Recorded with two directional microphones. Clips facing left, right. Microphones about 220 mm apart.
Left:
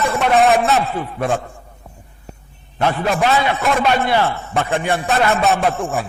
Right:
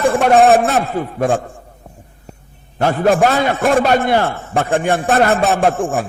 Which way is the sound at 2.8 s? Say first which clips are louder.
Right 5 dB; 45° right (ahead or behind).